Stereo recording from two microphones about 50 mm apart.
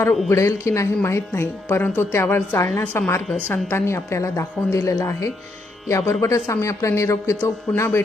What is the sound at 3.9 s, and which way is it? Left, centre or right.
A woman's voice, left.